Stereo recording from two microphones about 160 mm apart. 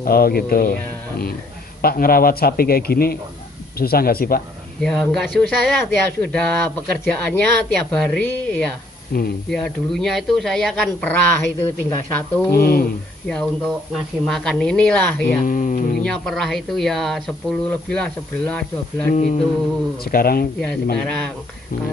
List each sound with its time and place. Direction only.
0.0 s speech: 70° left (ahead or behind)
1.8 s speech: 65° left (ahead or behind)
4.8 s speech: 5° left (ahead or behind)
9.1 s speech: 70° left (ahead or behind)
9.5 s speech: 5° left (ahead or behind)
12.5 s speech: 70° left (ahead or behind)
14.2 s speech: centre (ahead or behind)
15.2 s speech: 50° left (ahead or behind)
16.0 s speech: 5° left (ahead or behind)
20.1 s speech: 65° left (ahead or behind)
21.0 s speech: 5° left (ahead or behind)